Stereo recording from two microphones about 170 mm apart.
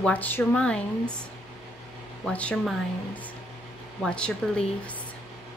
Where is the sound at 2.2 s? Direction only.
5° left (ahead or behind).